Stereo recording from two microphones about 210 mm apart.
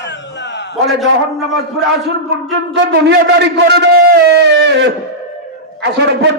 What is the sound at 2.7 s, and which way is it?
A man's voice, 60° right (ahead or behind).